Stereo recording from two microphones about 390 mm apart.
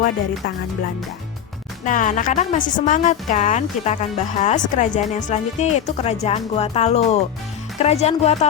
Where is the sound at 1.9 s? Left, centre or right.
Centre.